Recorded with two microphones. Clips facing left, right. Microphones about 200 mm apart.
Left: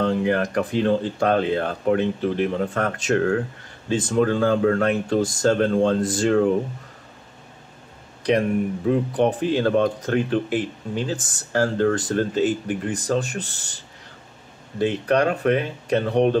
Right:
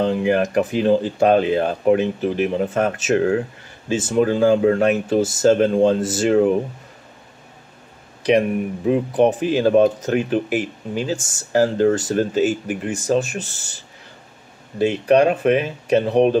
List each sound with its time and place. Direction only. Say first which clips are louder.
0.1 s speech: right 3 dB; 10° right (ahead or behind)
2.7 s speech: right 4 dB; 20° right (ahead or behind)
3.0 s speech: even; 10° right (ahead or behind)
5.5 s speech: right 4 dB; 20° right (ahead or behind)
5.9 s speech: right 2 dB; 5° right (ahead or behind)
8.2 s speech: right 3 dB; 10° right (ahead or behind)
15.1 s speech: right 5 dB; 20° right (ahead or behind)